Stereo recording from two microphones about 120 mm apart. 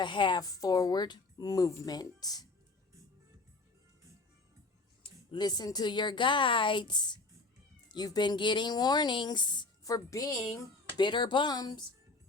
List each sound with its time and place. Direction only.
0.0 s speech: 40° left (ahead or behind)
5.3 s speech: 35° left (ahead or behind)